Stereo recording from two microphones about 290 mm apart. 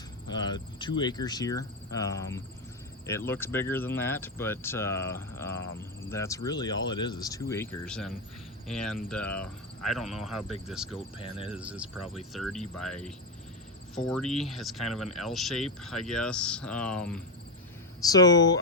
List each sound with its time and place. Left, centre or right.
0.3 s speech: centre
10.9 s speech: centre
11.5 s speech: centre